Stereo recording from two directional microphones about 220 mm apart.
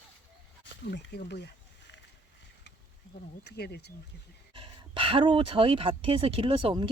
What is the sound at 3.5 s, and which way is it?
Speech, 45° left (ahead or behind).